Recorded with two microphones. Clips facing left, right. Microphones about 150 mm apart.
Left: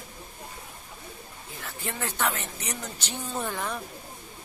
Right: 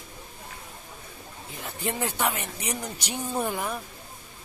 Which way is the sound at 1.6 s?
15° right (ahead or behind).